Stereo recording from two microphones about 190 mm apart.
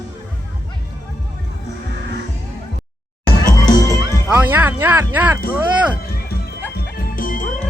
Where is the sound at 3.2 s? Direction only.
20° left (ahead or behind).